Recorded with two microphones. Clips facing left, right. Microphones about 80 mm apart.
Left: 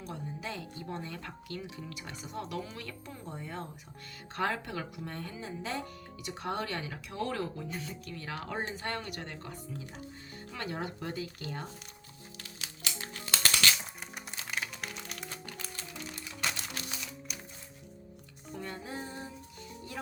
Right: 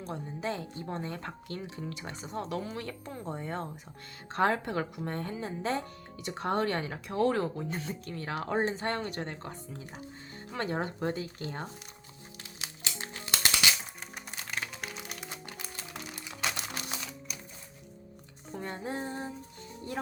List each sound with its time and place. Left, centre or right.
0.0 s speech: right
12.4 s music: right
14.3 s music: centre
18.5 s music: right